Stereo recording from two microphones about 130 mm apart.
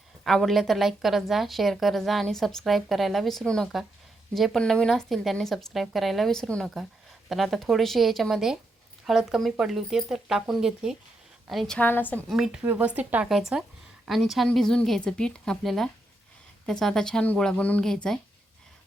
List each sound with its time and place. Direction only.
0.3 s a woman's voice: centre (ahead or behind)
11.9 s a woman's voice: 15° left (ahead or behind)
12.3 s a woman's voice: 5° right (ahead or behind)